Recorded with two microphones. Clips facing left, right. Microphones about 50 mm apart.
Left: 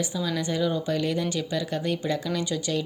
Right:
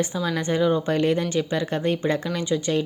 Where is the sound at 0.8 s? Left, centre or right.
Right.